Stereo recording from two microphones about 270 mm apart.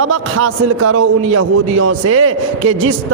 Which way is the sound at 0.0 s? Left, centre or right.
Right.